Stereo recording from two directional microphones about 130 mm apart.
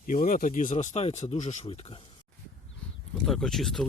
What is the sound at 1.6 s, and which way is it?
Speech, 50° left (ahead or behind).